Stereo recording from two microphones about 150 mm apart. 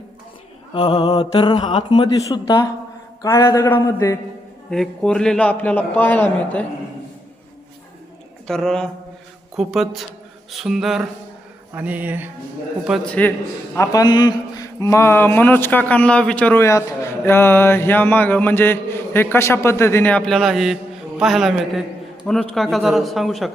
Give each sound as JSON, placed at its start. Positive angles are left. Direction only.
{"t": 0.7, "sound": "a man's voice", "side_deg": 30}
{"t": 1.2, "sound": "mantra", "side_deg": 35}
{"t": 3.2, "sound": "a man's voice", "side_deg": 20}
{"t": 4.7, "sound": "speech", "side_deg": 5}
{"t": 8.4, "sound": "a man's voice", "side_deg": 5}
{"t": 11.7, "sound": "a sound", "side_deg": -10}
{"t": 12.9, "sound": "speech", "side_deg": 10}
{"t": 13.7, "sound": "a man's voice", "side_deg": 25}